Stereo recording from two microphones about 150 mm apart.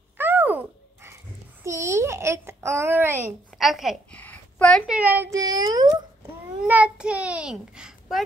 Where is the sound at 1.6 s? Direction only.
20° right (ahead or behind).